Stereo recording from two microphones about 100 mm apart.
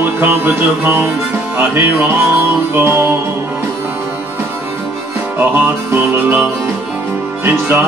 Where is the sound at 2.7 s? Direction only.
25° right (ahead or behind).